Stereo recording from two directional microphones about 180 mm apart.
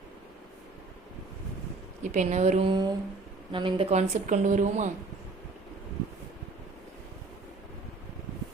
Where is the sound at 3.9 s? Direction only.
40° right (ahead or behind).